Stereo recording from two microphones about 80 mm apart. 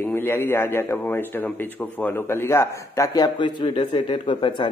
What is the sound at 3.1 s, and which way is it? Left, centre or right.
A man's voice, left.